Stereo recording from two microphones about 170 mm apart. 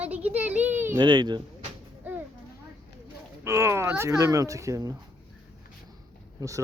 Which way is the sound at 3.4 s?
15° right (ahead or behind).